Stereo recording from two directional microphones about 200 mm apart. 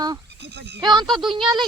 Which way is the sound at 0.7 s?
20° right (ahead or behind).